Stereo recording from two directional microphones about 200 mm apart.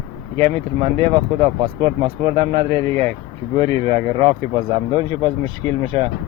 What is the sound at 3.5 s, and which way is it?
Speech, 30° right (ahead or behind).